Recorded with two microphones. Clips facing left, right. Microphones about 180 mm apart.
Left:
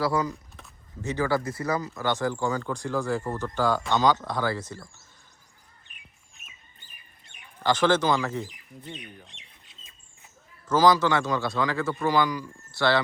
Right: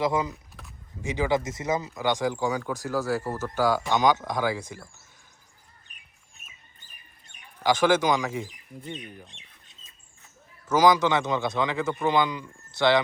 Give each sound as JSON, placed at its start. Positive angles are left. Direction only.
{"t": 0.0, "sound": "a man's voice", "side_deg": -20}
{"t": 0.6, "sound": "a sound", "side_deg": 0}
{"t": 1.0, "sound": "speech", "side_deg": -15}
{"t": 5.9, "sound": "chirp", "side_deg": -40}
{"t": 6.8, "sound": "chicken", "side_deg": -40}
{"t": 7.6, "sound": "speech", "side_deg": -10}
{"t": 10.7, "sound": "a man's voice", "side_deg": -15}